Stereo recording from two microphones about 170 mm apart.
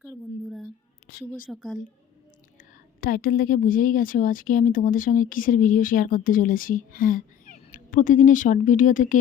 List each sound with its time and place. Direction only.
0.4 s a sound: centre (ahead or behind)
1.5 s speech: centre (ahead or behind)
2.6 s a woman's voice: 60° left (ahead or behind)